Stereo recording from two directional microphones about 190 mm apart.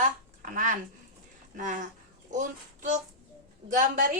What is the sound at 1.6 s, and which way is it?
A woman's voice, 45° right (ahead or behind).